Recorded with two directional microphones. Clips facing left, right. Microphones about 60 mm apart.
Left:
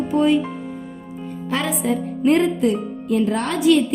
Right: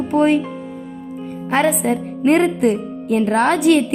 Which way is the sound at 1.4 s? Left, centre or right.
Right.